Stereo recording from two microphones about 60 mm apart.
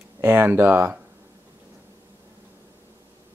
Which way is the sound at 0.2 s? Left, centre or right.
Right.